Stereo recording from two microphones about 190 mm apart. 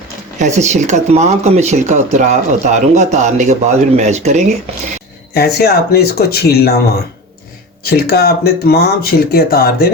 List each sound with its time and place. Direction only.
0.3 s speech: 40° right (ahead or behind)
5.3 s speech: 55° left (ahead or behind)
7.9 s speech: 55° left (ahead or behind)